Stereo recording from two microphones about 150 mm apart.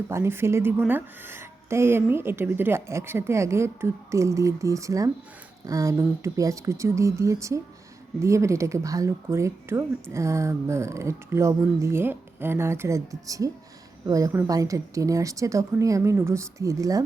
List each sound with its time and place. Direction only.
0.1 s a woman's voice: 15° right (ahead or behind)